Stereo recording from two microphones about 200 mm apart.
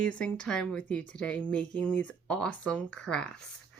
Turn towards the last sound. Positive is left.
turn(degrees=5)  # may be behind; listen again after turning